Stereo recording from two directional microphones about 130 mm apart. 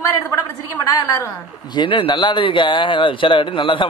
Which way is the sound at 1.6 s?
35° left (ahead or behind).